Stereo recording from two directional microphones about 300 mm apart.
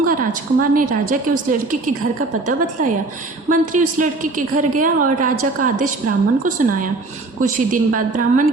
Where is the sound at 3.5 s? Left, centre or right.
Right.